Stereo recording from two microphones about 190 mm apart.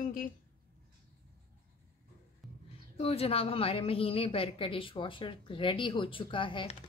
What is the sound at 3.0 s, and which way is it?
A woman's voice, 30° left (ahead or behind).